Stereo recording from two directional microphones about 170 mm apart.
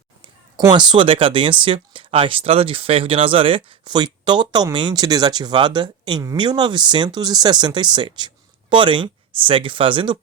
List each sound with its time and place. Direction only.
0.7 s speech: 25° right (ahead or behind)